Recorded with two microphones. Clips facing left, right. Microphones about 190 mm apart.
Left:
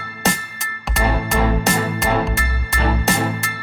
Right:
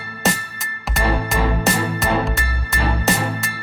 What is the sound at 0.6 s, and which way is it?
Music, centre (ahead or behind).